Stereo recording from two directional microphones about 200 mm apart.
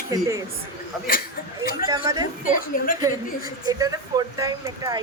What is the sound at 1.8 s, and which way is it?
Speech, 20° right (ahead or behind).